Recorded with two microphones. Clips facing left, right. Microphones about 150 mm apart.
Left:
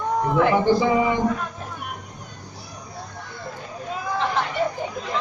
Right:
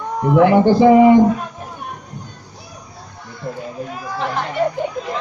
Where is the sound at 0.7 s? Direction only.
50° right (ahead or behind).